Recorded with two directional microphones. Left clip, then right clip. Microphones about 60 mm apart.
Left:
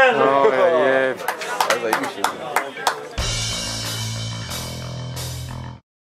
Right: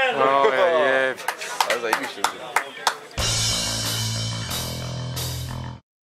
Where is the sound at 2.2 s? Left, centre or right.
Centre.